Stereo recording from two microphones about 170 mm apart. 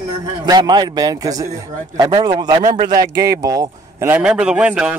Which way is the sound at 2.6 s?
45° right (ahead or behind).